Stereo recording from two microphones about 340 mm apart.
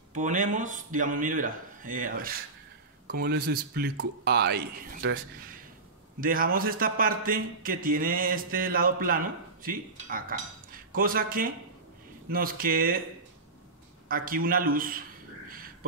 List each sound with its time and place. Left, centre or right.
0.1 s a man's voice: right
6.2 s a man's voice: right
14.0 s a man's voice: right